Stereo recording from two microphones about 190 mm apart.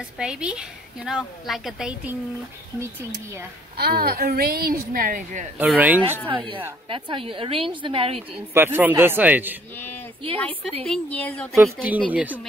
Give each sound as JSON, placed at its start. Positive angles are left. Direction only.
{"t": 0.2, "sound": "a woman's voice", "side_deg": -5}
{"t": 3.7, "sound": "a woman's voice", "side_deg": -55}
{"t": 5.6, "sound": "a man's voice", "side_deg": -10}
{"t": 6.2, "sound": "a woman's voice", "side_deg": -25}
{"t": 8.5, "sound": "a man's voice", "side_deg": -10}
{"t": 9.8, "sound": "a sound", "side_deg": 10}
{"t": 10.3, "sound": "a woman's voice", "side_deg": 5}
{"t": 11.5, "sound": "a man's voice", "side_deg": -10}